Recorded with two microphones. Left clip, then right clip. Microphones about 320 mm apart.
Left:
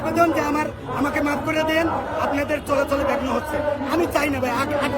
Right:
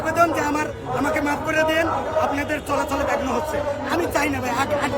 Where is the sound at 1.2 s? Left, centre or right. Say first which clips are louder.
Right 1 dB; centre.